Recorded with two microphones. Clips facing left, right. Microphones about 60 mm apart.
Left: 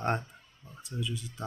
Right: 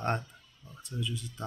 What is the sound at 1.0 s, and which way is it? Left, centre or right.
Speech, centre.